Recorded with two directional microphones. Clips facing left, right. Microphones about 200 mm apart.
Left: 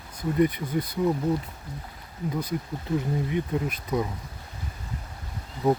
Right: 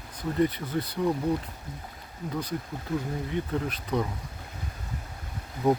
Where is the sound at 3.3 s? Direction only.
10° left (ahead or behind).